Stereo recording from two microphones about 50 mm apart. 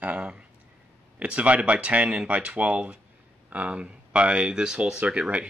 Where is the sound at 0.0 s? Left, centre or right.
Right.